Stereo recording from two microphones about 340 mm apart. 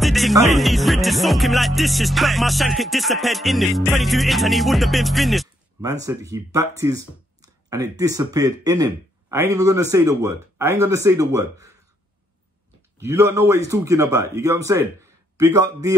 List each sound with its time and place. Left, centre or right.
0.0 s music: centre
5.8 s speech: centre
12.9 s speech: centre